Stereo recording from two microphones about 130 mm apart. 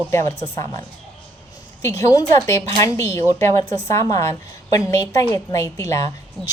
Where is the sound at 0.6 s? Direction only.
25° left (ahead or behind).